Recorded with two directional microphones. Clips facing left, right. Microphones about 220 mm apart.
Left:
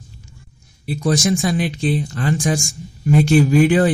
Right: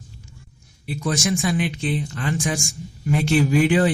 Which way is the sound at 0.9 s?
45° left (ahead or behind).